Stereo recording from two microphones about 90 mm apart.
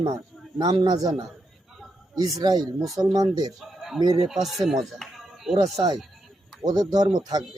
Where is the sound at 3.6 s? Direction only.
Centre (ahead or behind).